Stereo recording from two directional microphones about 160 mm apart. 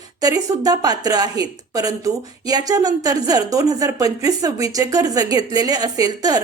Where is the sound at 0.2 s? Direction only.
20° right (ahead or behind).